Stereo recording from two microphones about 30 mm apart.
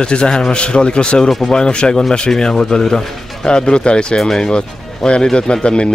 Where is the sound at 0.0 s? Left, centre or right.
Left.